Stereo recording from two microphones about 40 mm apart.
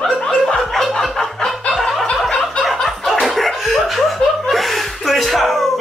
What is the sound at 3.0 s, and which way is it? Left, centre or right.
Laughter, centre.